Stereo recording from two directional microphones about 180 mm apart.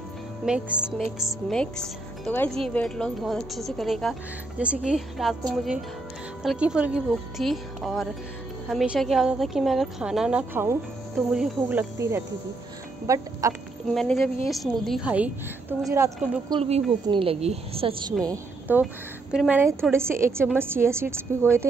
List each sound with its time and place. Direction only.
0.5 s a woman's voice: 5° right (ahead or behind)
13.0 s a woman's voice: 15° right (ahead or behind)
13.8 s a woman's voice: centre (ahead or behind); by 16.1 s 15° right (ahead or behind)
16.4 s a woman's voice: 30° right (ahead or behind)
18.2 s a woman's voice: 15° right (ahead or behind)